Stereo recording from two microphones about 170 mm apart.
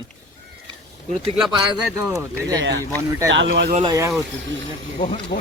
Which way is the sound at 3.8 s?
20° right (ahead or behind).